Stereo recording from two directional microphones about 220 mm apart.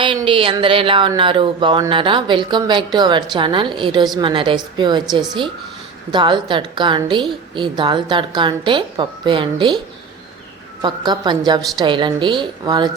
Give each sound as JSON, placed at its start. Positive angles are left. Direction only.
{"t": 0.0, "sound": "music", "side_deg": -20}
{"t": 6.1, "sound": "music", "side_deg": -20}
{"t": 10.8, "sound": "music", "side_deg": -20}